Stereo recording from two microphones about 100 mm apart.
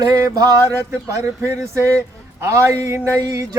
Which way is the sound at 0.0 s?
40° right (ahead or behind).